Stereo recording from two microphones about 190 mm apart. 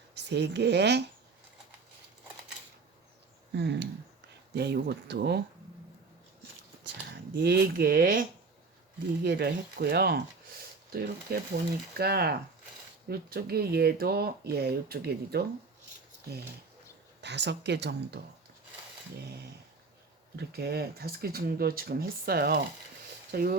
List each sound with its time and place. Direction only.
0.1 s speech: 65° right (ahead or behind)
3.5 s speech: 65° right (ahead or behind)
7.3 s speech: 60° right (ahead or behind)
9.2 s speech: 60° right (ahead or behind)
17.2 s speech: 65° right (ahead or behind)
20.3 s speech: 60° right (ahead or behind)